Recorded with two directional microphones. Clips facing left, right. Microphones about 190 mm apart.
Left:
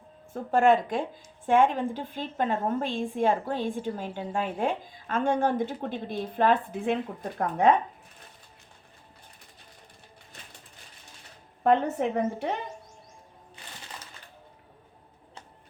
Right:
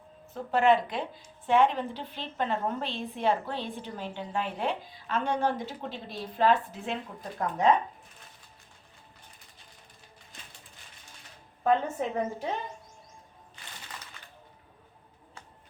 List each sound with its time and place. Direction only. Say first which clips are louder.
0.5 s a woman's voice: left 2 dB; 45° left (ahead or behind)
11.6 s a woman's voice: left 3 dB; 65° left (ahead or behind)